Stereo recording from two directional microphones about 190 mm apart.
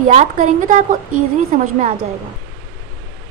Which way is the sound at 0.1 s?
35° right (ahead or behind).